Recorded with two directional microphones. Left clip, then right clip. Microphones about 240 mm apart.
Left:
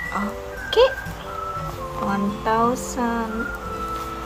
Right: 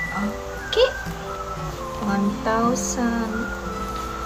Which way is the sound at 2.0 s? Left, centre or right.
Centre.